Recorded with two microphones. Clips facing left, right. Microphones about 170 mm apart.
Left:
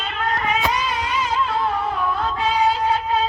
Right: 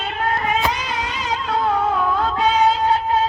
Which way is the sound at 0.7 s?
65° right (ahead or behind).